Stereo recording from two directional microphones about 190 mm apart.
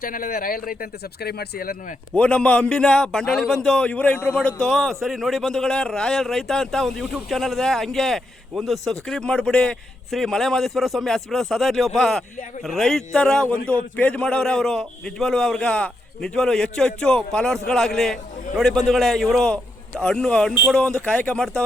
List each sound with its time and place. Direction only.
0.0 s speech: 50° left (ahead or behind)
2.1 s a man's voice: 5° left (ahead or behind)